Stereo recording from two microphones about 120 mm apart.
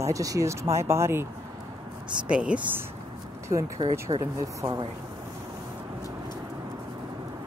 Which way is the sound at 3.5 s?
25° right (ahead or behind).